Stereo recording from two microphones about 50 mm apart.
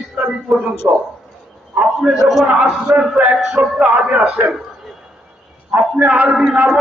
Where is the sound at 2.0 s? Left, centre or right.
Centre.